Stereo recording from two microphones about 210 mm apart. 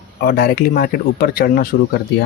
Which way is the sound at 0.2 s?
45° left (ahead or behind).